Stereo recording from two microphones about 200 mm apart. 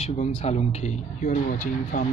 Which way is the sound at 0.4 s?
35° left (ahead or behind).